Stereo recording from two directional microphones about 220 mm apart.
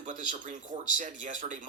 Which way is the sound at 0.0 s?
35° right (ahead or behind).